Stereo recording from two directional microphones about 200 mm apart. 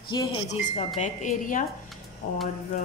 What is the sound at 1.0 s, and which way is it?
Speech, 40° left (ahead or behind).